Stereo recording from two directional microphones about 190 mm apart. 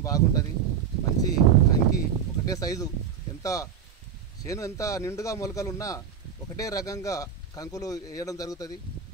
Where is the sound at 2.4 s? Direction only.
20° left (ahead or behind).